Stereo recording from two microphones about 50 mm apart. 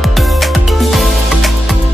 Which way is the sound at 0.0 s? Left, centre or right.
Centre.